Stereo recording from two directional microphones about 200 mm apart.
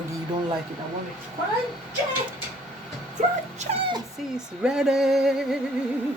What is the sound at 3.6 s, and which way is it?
Speech, 25° right (ahead or behind).